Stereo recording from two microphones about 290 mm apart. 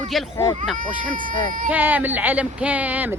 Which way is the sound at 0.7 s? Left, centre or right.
Right.